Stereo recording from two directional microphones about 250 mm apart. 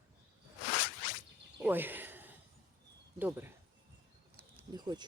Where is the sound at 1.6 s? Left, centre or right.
Centre.